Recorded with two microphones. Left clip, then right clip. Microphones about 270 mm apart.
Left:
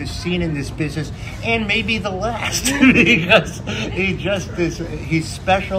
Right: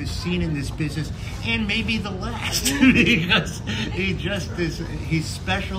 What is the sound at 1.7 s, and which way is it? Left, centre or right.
Speech, right.